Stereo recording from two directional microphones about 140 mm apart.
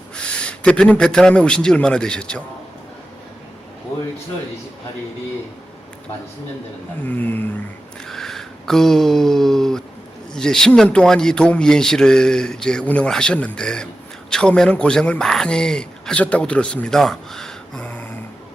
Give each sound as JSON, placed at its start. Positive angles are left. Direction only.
{"t": 0.2, "sound": "speech", "side_deg": 5}
{"t": 7.1, "sound": "a sound", "side_deg": 10}
{"t": 10.3, "sound": "speech", "side_deg": 5}